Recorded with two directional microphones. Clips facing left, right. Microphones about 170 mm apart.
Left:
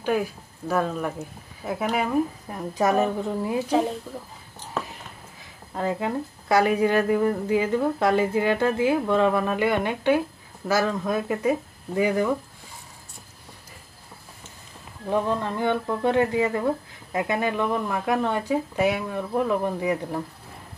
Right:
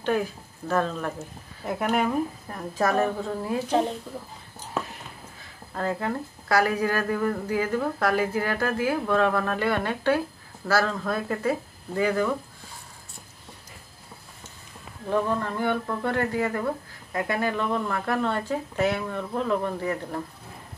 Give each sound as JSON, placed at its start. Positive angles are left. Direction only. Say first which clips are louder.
{"t": 0.0, "sound": "speech", "louder": "left 1 dB", "side_deg": 10}
{"t": 2.5, "sound": "speech", "louder": "left 2 dB", "side_deg": 20}
{"t": 5.8, "sound": "speech", "louder": "left 2 dB", "side_deg": 15}
{"t": 15.0, "sound": "speech", "louder": "left 1 dB", "side_deg": 20}